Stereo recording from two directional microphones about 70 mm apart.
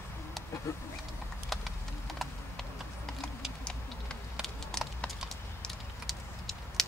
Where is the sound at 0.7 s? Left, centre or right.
Left.